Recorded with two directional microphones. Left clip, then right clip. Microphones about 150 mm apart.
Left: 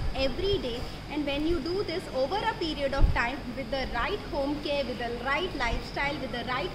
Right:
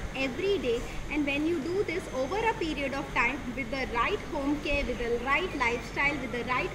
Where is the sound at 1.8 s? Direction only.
25° left (ahead or behind).